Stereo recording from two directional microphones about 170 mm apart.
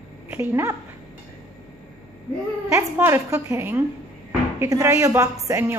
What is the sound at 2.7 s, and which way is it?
A woman's voice, 15° right (ahead or behind).